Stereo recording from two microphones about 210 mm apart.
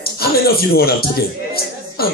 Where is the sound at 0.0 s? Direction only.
45° left (ahead or behind).